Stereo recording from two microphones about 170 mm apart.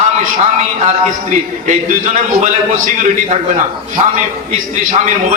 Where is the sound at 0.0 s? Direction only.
45° right (ahead or behind).